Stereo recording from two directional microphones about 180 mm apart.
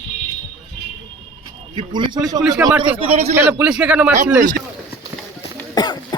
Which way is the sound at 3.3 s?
10° right (ahead or behind).